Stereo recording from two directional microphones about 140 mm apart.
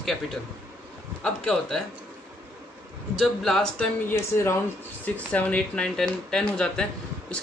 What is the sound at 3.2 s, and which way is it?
Speech, centre (ahead or behind).